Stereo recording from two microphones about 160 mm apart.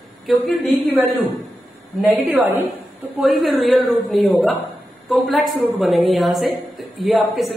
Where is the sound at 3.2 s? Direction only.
Centre (ahead or behind).